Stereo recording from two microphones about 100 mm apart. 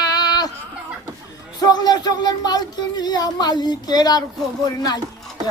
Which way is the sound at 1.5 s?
40° left (ahead or behind).